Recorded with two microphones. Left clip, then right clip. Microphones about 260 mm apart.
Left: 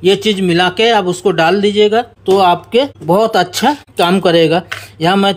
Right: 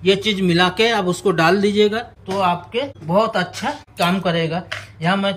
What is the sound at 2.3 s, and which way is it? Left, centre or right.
Speech, left.